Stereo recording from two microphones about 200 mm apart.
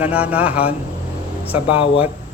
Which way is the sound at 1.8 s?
25° left (ahead or behind).